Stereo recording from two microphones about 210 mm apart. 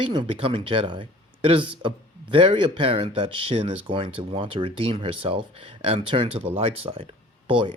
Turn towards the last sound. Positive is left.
turn(degrees=-25)  # may be behind; listen again after turning